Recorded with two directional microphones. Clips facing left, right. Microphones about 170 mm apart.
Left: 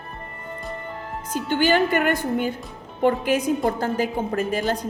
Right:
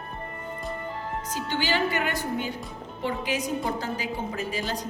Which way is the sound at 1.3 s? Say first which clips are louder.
Left 8 dB; 50° left (ahead or behind).